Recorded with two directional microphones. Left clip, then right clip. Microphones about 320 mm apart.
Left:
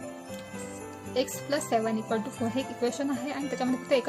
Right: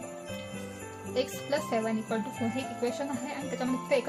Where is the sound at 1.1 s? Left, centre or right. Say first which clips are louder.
Left 1 dB; centre.